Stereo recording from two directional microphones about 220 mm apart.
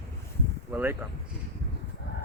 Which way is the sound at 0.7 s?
10° right (ahead or behind).